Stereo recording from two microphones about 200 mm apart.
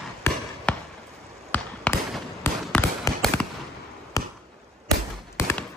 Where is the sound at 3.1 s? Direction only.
15° left (ahead or behind).